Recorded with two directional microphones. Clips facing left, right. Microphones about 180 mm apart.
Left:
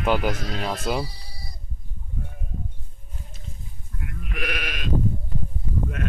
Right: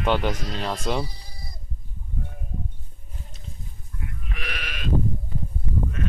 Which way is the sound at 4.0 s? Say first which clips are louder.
Left 5 dB; 55° left (ahead or behind).